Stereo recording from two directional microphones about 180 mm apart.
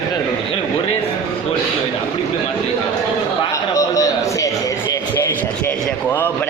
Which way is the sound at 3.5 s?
15° left (ahead or behind).